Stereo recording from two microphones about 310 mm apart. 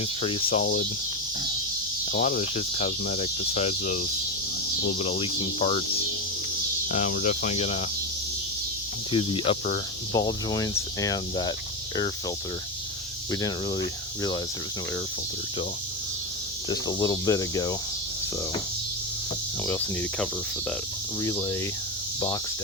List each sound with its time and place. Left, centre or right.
0.2 s speech: centre
2.0 s speech: left
6.8 s speech: left
9.1 s speech: centre
13.3 s speech: centre
16.6 s speech: centre
19.6 s speech: centre